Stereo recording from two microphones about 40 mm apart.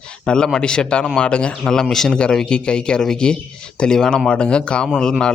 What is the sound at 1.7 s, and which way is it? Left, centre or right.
Speech, centre.